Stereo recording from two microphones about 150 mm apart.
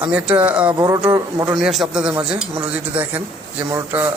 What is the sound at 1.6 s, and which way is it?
A man's voice, centre (ahead or behind).